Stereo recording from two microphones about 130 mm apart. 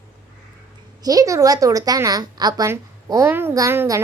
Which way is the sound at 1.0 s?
25° right (ahead or behind).